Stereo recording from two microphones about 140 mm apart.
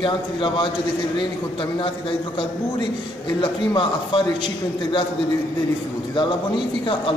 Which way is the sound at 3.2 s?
35° left (ahead or behind).